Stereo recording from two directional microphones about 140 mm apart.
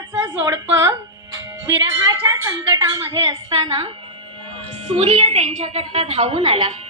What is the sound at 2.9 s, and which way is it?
A woman's voice, 30° right (ahead or behind).